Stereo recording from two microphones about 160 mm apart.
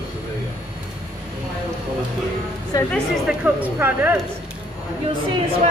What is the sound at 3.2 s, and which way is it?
Speech, 10° right (ahead or behind).